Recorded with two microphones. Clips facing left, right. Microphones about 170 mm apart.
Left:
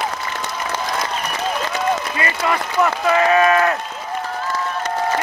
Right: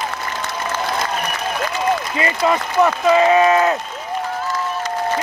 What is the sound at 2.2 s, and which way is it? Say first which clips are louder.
Speech: right 3 dB; 20° right (ahead or behind).